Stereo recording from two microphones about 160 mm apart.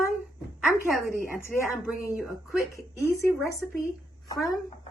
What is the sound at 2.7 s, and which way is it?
Speech, 20° left (ahead or behind).